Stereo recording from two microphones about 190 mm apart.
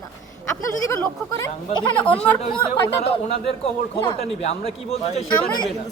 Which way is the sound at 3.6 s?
35° left (ahead or behind).